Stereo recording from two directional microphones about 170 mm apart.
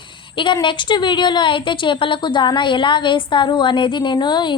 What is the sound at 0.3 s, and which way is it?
A woman's voice, 30° left (ahead or behind).